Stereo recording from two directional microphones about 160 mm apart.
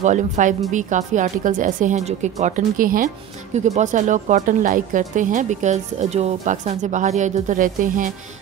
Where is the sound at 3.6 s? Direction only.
50° right (ahead or behind).